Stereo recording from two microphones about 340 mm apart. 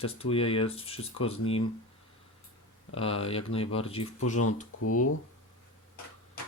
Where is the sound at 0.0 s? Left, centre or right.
Centre.